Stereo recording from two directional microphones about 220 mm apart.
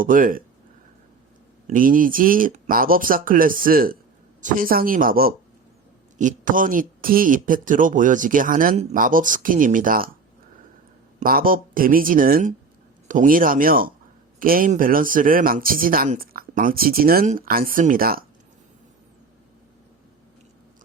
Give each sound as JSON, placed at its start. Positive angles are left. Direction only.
{"t": 0.0, "sound": "speech", "side_deg": -40}
{"t": 1.6, "sound": "speech", "side_deg": -40}
{"t": 11.2, "sound": "speech", "side_deg": -40}